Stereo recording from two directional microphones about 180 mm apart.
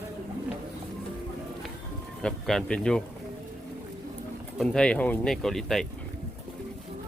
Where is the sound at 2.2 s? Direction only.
5° left (ahead or behind).